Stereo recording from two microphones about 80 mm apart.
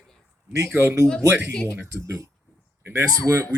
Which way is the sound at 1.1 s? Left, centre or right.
Centre.